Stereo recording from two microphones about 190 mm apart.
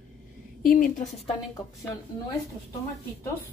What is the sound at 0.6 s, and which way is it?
Speech, 50° left (ahead or behind).